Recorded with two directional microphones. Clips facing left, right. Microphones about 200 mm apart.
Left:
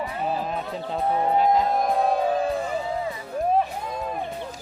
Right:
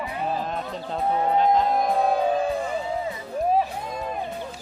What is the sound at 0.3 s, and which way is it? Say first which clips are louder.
Speech: left 1 dB; 5° left (ahead or behind).